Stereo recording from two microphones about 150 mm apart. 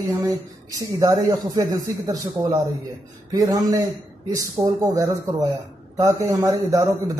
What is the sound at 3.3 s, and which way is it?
Speech, 25° right (ahead or behind).